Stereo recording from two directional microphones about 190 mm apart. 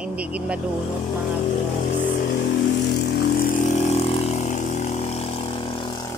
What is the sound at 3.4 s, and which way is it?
Vehicle, 45° left (ahead or behind).